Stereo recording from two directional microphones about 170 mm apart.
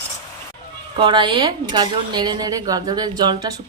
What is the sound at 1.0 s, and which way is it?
A woman's voice, 30° right (ahead or behind).